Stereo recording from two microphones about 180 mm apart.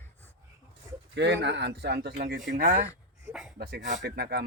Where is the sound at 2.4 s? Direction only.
45° right (ahead or behind).